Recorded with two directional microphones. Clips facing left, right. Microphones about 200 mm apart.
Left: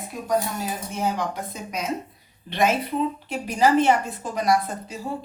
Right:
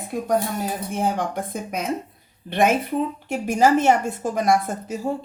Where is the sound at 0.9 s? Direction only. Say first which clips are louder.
Right 2 dB; 50° right (ahead or behind).